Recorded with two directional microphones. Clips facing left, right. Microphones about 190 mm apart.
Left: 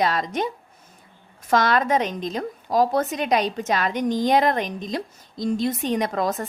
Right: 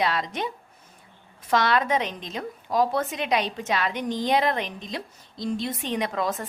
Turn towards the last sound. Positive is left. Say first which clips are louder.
# left 3 dB
turn(degrees=45)  # may be behind; listen again after turning